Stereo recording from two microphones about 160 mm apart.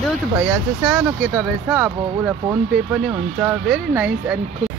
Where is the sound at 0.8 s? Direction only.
10° right (ahead or behind).